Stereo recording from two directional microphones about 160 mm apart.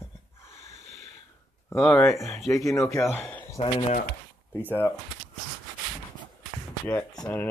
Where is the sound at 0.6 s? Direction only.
45° right (ahead or behind).